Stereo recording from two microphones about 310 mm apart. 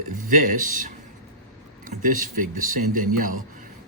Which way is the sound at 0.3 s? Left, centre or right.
Right.